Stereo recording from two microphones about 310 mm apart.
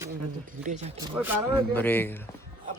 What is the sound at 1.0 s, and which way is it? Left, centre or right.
Speech, centre.